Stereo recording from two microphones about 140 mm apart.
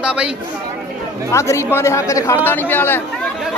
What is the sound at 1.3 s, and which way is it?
Speech, 20° left (ahead or behind).